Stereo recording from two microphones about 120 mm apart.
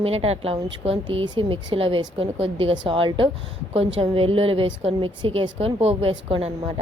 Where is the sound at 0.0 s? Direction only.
55° right (ahead or behind).